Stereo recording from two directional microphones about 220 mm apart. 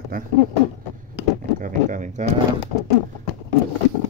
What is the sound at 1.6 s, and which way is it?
Speech, 35° right (ahead or behind).